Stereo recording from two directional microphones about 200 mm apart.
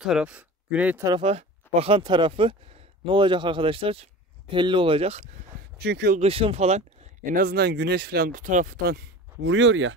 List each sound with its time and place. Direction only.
0.0 s speech: 5° right (ahead or behind)
1.0 s speech: 25° right (ahead or behind)
5.8 s speech: 55° right (ahead or behind)
6.1 s speech: 30° right (ahead or behind); by 9.0 s 45° right (ahead or behind)
9.4 s speech: 70° right (ahead or behind)